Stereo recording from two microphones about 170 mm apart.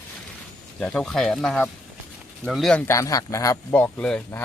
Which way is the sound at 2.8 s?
20° left (ahead or behind).